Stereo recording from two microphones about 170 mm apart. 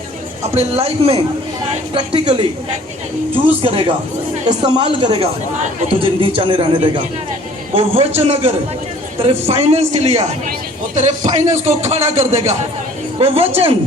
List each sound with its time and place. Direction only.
0.5 s a man's voice: 35° right (ahead or behind)
3.6 s a man's voice: 35° right (ahead or behind)